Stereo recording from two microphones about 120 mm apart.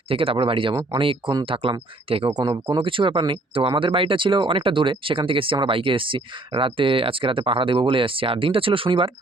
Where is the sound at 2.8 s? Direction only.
45° right (ahead or behind).